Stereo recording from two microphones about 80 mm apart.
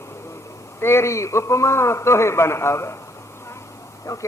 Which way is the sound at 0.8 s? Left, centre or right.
Left.